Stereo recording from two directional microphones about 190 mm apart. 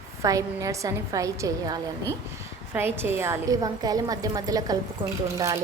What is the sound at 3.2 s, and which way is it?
A woman's voice, 15° right (ahead or behind).